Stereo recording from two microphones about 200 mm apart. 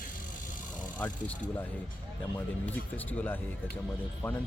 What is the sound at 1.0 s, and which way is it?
Speech, 10° left (ahead or behind).